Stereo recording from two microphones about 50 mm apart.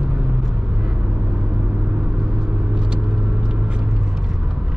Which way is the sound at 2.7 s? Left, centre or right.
Centre.